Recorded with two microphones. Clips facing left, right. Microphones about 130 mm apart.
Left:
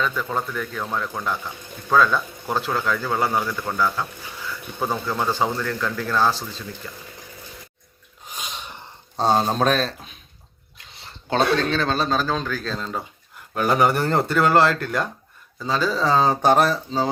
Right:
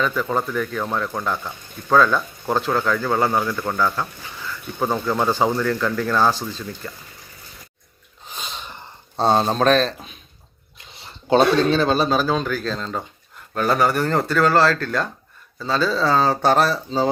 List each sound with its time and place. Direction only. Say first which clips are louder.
0.0 s speech: right 3 dB; 5° right (ahead or behind)
5.3 s speech: right 4 dB; 5° right (ahead or behind)
8.3 s sneeze: right 1 dB; 10° left (ahead or behind)
8.6 s speech: right 1 dB; 5° left (ahead or behind)
11.3 s a man's voice: right 5 dB; 10° right (ahead or behind); by 16.6 s 20° left (ahead or behind)
16.6 s a man's voice: right 2 dB; 10° right (ahead or behind)